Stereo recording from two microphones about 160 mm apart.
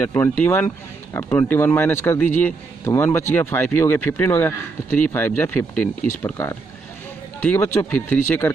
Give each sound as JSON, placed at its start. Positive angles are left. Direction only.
{"t": 0.0, "sound": "a man's voice", "side_deg": 10}